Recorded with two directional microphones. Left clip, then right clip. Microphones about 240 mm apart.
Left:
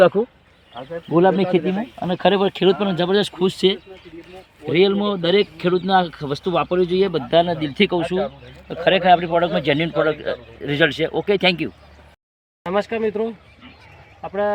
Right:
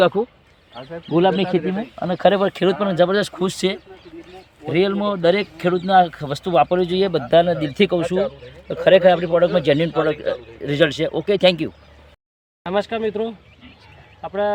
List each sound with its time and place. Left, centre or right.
0.0 s speech: centre; by 11.7 s right
12.6 s speech: centre
14.2 s speech: centre